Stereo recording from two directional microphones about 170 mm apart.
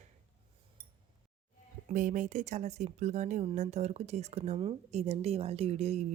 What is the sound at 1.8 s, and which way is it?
Speech, 50° right (ahead or behind).